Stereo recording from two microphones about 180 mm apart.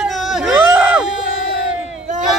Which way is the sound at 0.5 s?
15° right (ahead or behind).